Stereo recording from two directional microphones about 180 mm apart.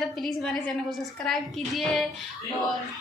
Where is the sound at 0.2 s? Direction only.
Centre (ahead or behind).